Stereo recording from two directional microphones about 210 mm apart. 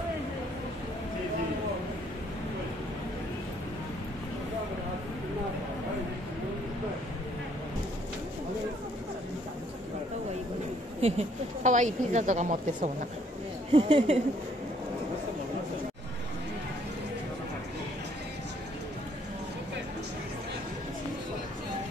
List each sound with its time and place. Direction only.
11.0 s a woman's voice: 30° right (ahead or behind)